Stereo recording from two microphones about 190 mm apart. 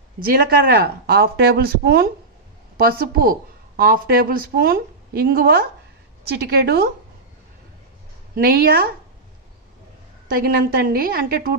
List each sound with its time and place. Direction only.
0.3 s a woman's voice: 50° right (ahead or behind)
8.4 s speech: 55° right (ahead or behind)
10.3 s speech: 50° right (ahead or behind)